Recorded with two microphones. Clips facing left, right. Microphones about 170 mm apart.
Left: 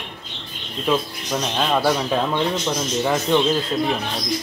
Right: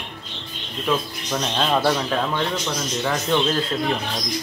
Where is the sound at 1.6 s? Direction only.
5° left (ahead or behind).